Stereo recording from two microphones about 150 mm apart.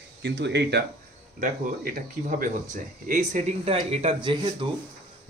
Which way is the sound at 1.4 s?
65° right (ahead or behind).